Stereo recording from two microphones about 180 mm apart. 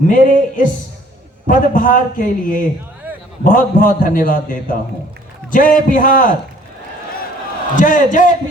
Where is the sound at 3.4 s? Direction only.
50° left (ahead or behind).